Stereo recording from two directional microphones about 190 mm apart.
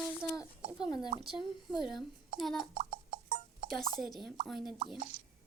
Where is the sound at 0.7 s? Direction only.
20° left (ahead or behind).